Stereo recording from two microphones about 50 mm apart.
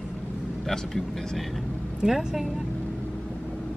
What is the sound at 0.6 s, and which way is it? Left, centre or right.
Speech, centre.